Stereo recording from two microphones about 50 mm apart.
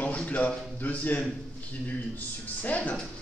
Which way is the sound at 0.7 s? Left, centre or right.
Left.